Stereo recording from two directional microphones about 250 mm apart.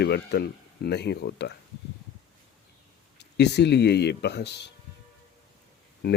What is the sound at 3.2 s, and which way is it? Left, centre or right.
Speech, left.